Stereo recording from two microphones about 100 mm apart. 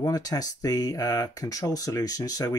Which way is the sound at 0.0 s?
40° left (ahead or behind).